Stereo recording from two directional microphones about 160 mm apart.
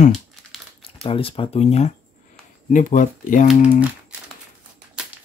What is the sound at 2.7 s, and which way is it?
Speech, 55° left (ahead or behind).